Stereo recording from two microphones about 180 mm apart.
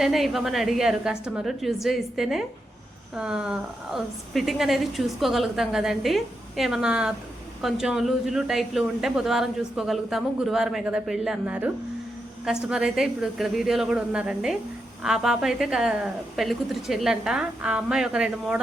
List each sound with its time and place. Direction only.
0.0 s speech: centre (ahead or behind)
12.7 s speech: 5° right (ahead or behind)